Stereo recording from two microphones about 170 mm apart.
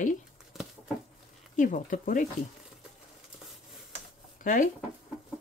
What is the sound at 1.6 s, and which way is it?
Speech, 50° left (ahead or behind).